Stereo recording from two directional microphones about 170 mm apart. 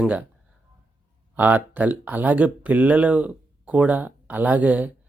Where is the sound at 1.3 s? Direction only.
10° right (ahead or behind).